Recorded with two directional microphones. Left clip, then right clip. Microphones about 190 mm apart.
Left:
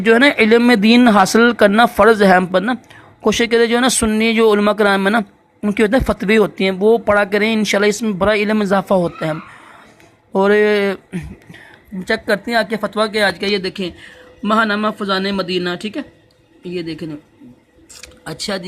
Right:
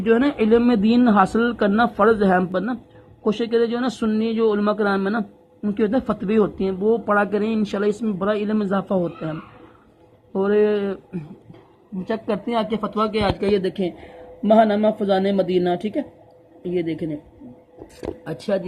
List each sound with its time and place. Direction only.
0.0 s a man's voice: 40° left (ahead or behind)
2.4 s speech: 30° left (ahead or behind)
10.3 s speech: 40° left (ahead or behind)
12.0 s speech: 15° left (ahead or behind)
13.1 s speech: 5° left (ahead or behind)